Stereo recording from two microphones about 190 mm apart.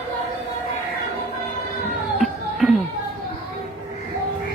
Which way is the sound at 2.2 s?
Centre (ahead or behind).